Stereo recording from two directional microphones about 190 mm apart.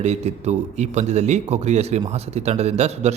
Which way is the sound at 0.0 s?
35° right (ahead or behind).